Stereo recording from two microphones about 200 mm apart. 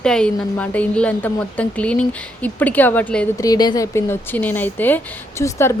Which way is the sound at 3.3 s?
20° left (ahead or behind).